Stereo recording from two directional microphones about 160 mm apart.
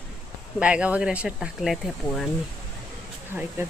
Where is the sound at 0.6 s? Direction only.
5° right (ahead or behind).